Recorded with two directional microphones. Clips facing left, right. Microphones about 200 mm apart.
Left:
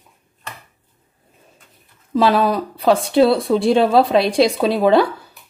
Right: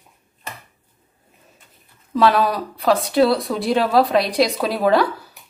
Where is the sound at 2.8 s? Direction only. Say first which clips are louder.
Left 2 dB; 30° left (ahead or behind).